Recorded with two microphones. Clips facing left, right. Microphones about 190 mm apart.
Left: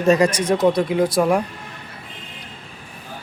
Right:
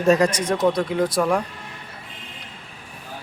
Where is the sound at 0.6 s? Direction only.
10° left (ahead or behind).